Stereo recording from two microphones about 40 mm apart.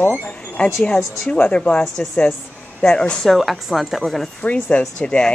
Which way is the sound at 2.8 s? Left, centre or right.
Left.